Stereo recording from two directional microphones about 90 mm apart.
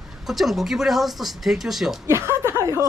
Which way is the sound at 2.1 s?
30° right (ahead or behind).